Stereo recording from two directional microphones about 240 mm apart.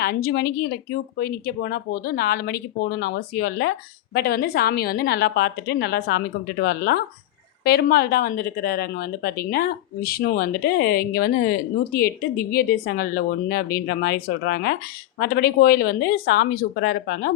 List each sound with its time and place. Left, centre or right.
0.0 s a woman's voice: left